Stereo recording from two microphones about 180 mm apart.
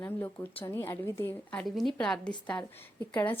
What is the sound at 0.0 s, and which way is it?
A woman's voice, 10° left (ahead or behind).